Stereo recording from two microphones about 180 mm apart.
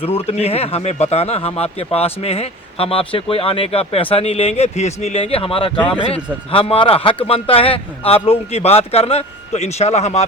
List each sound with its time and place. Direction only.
0.0 s speech: 35° left (ahead or behind)
5.7 s speech: 5° left (ahead or behind)
6.1 s speech: 30° left (ahead or behind)